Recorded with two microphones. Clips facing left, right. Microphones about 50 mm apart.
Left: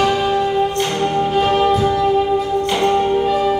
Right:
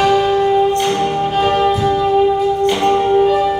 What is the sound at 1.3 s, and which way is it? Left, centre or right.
Music, centre.